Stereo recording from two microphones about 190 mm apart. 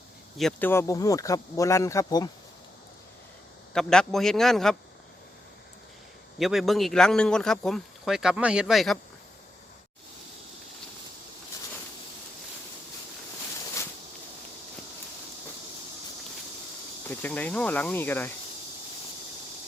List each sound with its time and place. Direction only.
0.3 s speech: centre (ahead or behind)
0.7 s speech: 15° left (ahead or behind)
3.7 s speech: 5° left (ahead or behind)
6.4 s speech: centre (ahead or behind)
17.1 s speech: 10° left (ahead or behind)